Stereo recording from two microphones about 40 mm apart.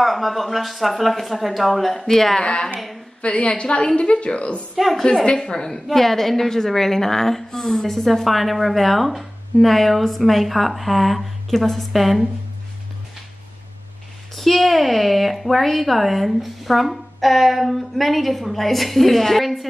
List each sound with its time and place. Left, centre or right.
0.0 s a woman's voice: centre
2.4 s a woman's voice: left
4.7 s a woman's voice: centre
5.2 s a woman's voice: centre
14.3 s a woman's voice: centre